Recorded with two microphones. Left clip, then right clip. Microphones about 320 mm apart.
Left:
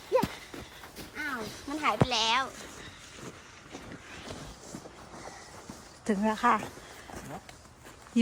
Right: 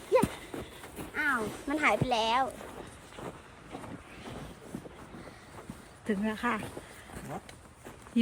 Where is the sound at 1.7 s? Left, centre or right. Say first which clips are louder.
Even; right.